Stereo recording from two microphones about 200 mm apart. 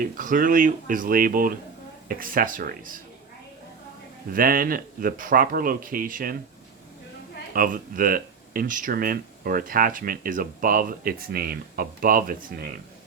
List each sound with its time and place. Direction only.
0.0 s speech: 40° right (ahead or behind)
4.3 s speech: 45° right (ahead or behind)
7.5 s speech: 45° right (ahead or behind)